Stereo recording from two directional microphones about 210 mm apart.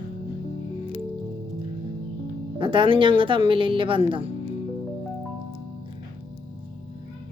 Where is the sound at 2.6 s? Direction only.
25° right (ahead or behind).